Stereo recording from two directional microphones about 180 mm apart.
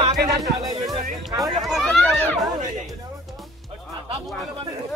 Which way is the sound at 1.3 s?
20° right (ahead or behind).